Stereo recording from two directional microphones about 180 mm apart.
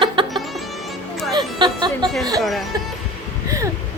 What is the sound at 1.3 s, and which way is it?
Speech, 25° right (ahead or behind).